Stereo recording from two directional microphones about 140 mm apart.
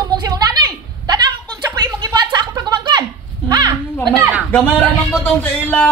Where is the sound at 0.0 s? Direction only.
30° right (ahead or behind).